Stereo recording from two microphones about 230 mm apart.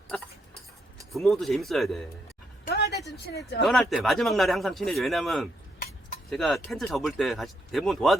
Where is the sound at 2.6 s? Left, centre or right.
Left.